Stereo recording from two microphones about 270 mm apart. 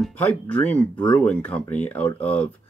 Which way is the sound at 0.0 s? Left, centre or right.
Centre.